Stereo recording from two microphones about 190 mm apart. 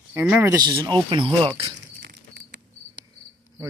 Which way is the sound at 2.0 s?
60° right (ahead or behind).